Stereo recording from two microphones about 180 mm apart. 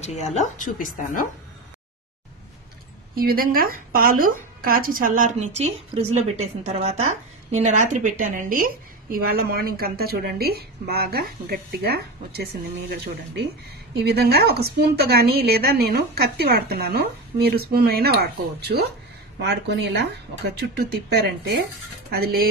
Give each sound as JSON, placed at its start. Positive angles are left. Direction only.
{"t": 0.0, "sound": "a woman's voice", "side_deg": 40}
{"t": 3.2, "sound": "a woman's voice", "side_deg": -55}
{"t": 19.3, "sound": "a woman's voice", "side_deg": -70}